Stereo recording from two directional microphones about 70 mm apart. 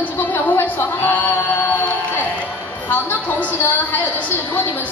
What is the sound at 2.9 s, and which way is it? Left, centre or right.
Speech, left.